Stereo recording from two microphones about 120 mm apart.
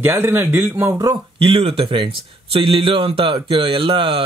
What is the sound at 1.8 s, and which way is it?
Speech, 40° right (ahead or behind).